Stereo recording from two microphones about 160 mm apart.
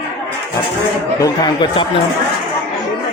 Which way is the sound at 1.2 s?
25° left (ahead or behind).